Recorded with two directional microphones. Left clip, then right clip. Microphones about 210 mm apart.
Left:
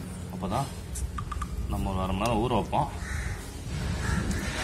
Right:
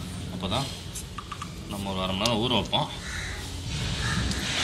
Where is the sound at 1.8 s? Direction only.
15° left (ahead or behind).